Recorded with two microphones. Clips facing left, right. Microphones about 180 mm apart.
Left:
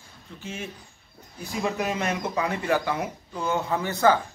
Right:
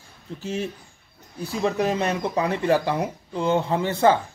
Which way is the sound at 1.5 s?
30° right (ahead or behind).